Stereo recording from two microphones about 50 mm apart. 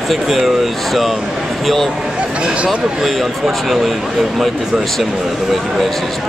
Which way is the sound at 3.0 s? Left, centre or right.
Centre.